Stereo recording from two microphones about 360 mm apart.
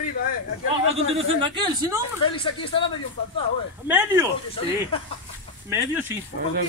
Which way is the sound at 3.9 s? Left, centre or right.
Centre.